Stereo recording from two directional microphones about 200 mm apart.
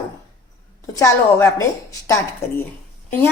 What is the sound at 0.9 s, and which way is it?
Speech, 15° left (ahead or behind).